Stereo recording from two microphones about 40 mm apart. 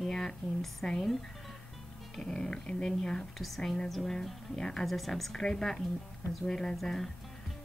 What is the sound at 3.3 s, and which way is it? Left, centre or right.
Speech, centre.